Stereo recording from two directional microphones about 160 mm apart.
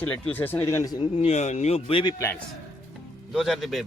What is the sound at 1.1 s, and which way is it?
Speech, 40° left (ahead or behind).